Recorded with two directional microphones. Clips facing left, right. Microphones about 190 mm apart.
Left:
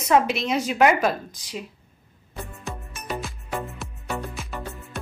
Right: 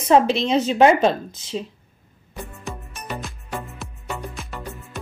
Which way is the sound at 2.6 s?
Centre (ahead or behind).